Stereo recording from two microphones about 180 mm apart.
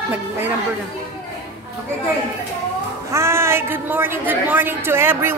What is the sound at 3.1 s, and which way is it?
A woman's voice, 15° right (ahead or behind).